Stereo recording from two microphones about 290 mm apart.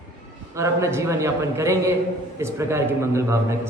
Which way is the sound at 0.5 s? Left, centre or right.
Centre.